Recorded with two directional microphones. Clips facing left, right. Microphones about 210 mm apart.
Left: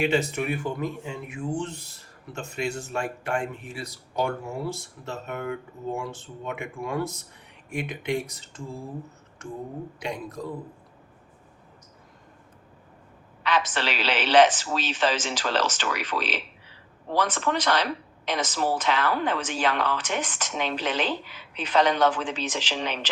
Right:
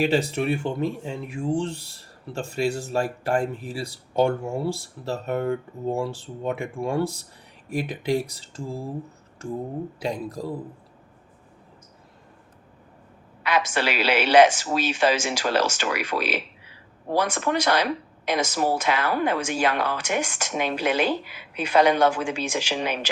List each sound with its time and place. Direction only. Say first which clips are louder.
0.0 s speech: right 2 dB; 35° right (ahead or behind)
10.0 s speech: right 3 dB; 35° right (ahead or behind)
13.4 s a woman's voice: right 2 dB; 10° right (ahead or behind)